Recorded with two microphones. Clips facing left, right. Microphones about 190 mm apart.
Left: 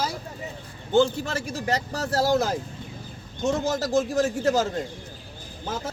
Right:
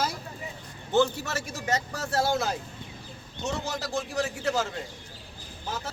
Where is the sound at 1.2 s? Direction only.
30° left (ahead or behind).